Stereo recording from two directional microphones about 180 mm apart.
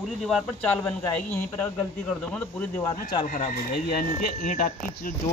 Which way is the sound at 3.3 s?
50° left (ahead or behind).